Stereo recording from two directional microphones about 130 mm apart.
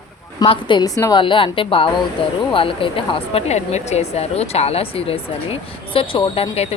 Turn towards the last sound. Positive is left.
turn(degrees=45)  # may be behind; listen again after turning